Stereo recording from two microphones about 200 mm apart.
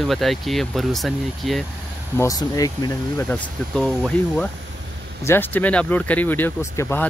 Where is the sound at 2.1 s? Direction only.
15° left (ahead or behind).